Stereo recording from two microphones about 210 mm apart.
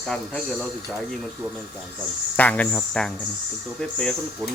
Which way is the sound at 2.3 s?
5° left (ahead or behind).